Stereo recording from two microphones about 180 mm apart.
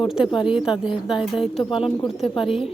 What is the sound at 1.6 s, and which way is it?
Speech, 30° left (ahead or behind).